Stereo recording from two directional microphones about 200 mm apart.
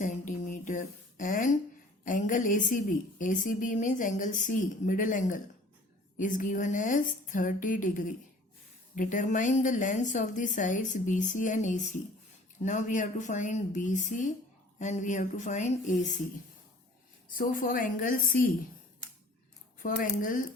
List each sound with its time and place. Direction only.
0.0 s a sound: 40° left (ahead or behind)
2.0 s a woman's voice: 40° left (ahead or behind)
17.3 s a woman's voice: 45° left (ahead or behind)
19.8 s a woman's voice: 40° left (ahead or behind)